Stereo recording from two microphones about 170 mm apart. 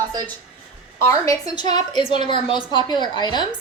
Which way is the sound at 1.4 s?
25° left (ahead or behind).